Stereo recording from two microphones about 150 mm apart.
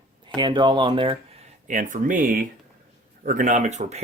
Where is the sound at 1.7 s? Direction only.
60° right (ahead or behind).